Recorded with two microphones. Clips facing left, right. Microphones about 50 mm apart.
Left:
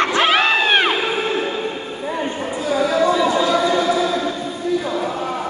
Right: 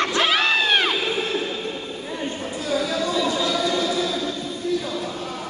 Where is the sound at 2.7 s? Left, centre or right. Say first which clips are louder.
Left 7 dB; left.